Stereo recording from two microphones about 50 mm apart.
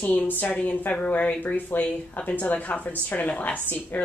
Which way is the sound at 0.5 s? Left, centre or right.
Left.